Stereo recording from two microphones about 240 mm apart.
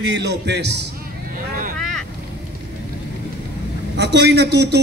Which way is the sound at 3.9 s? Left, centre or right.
Right.